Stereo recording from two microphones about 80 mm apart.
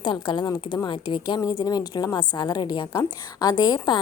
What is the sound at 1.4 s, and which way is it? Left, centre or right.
A woman's voice, left.